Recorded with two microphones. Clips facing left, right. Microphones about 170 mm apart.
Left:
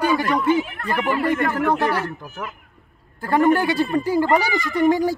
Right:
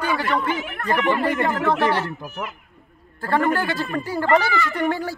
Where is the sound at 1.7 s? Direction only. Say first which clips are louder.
Right 2 dB; 15° left (ahead or behind).